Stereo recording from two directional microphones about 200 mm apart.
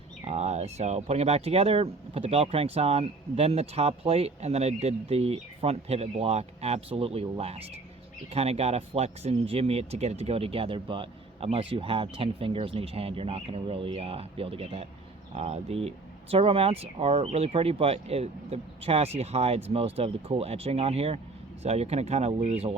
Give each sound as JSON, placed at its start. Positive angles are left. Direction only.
{"t": 0.3, "sound": "speech", "side_deg": -35}